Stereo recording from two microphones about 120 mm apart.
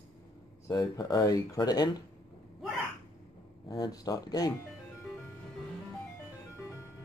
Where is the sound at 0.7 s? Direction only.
35° left (ahead or behind).